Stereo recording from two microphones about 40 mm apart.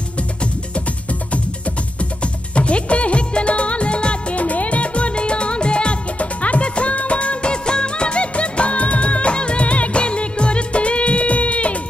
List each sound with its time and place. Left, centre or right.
2.5 s music of bollywood: left